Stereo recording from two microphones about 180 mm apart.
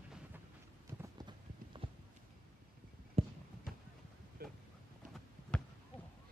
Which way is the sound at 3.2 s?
35° right (ahead or behind).